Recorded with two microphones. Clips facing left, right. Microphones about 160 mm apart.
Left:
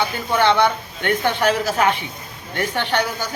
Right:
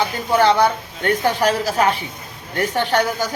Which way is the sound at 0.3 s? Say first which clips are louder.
Right 2 dB; 40° right (ahead or behind).